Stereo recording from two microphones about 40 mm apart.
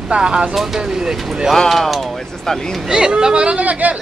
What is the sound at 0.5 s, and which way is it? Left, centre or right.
Speech, centre.